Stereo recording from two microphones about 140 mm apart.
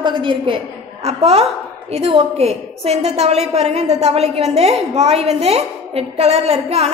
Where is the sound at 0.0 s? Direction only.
35° right (ahead or behind).